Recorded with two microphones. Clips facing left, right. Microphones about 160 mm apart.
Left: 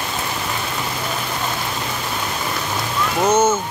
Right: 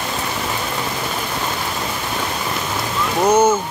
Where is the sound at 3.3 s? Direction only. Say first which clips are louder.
Right 2 dB; 15° right (ahead or behind).